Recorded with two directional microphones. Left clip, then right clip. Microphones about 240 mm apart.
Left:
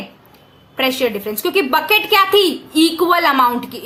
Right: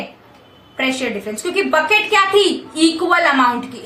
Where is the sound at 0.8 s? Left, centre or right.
Left.